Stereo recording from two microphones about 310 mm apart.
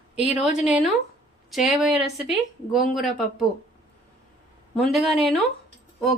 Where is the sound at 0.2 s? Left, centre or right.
Left.